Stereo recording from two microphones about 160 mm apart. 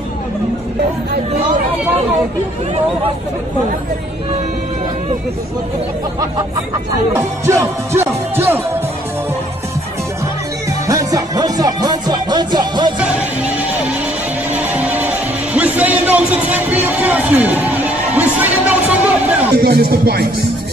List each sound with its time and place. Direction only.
7.2 s music: 20° right (ahead or behind)
10.9 s music: 20° right (ahead or behind)
13.0 s music: 10° right (ahead or behind)
19.6 s music: 85° right